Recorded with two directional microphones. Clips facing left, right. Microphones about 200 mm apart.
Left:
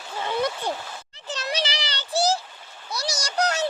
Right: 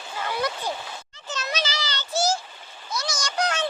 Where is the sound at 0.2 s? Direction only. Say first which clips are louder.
Left 2 dB; 25° left (ahead or behind).